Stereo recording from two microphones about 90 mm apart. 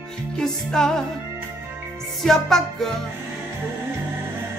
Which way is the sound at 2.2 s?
5° left (ahead or behind).